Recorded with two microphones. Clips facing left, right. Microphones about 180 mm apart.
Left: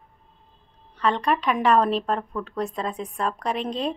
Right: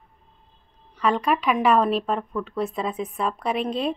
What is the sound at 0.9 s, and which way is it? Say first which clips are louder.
A woman's voice: right 1 dB; 5° right (ahead or behind).